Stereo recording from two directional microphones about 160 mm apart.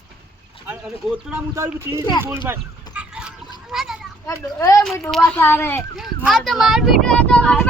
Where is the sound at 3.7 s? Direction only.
5° right (ahead or behind).